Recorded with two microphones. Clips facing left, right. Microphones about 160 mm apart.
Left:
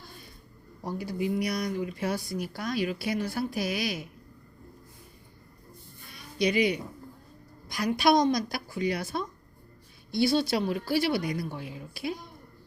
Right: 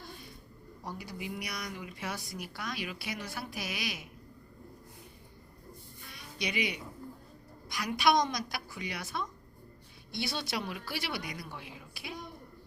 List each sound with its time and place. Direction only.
0.9 s speech: 35° left (ahead or behind)
6.4 s speech: 35° left (ahead or behind)